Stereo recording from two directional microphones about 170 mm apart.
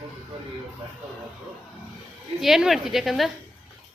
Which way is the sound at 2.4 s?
Centre (ahead or behind).